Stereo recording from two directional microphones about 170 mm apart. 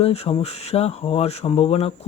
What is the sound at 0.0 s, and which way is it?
Speech, 35° left (ahead or behind).